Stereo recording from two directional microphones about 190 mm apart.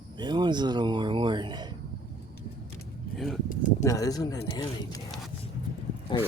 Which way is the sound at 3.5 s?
45° left (ahead or behind).